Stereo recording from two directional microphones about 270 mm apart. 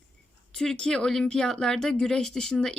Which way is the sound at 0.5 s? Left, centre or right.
Centre.